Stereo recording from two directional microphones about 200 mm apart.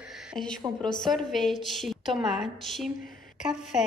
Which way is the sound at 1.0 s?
Centre (ahead or behind).